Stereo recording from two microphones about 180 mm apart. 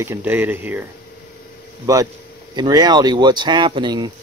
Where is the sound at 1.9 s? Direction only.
20° right (ahead or behind).